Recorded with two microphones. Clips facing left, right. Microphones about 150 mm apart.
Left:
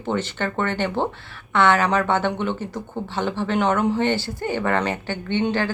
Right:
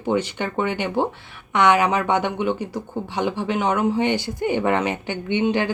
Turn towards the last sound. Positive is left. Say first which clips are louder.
# right 2 dB
turn(degrees=-15)  # may be behind; listen again after turning